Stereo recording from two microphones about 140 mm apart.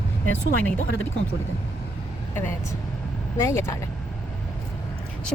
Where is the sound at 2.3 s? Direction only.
15° left (ahead or behind).